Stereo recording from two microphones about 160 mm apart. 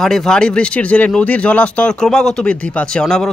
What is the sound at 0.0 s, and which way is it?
A man's voice, 5° left (ahead or behind).